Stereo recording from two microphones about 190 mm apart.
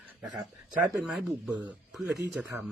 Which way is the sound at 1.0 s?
Centre (ahead or behind).